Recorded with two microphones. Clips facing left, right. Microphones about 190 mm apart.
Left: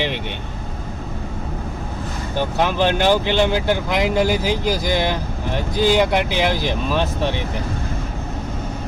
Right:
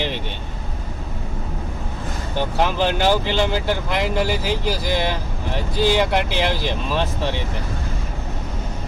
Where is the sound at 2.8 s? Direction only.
55° left (ahead or behind).